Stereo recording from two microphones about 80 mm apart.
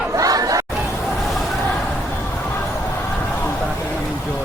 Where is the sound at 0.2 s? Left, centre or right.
Right.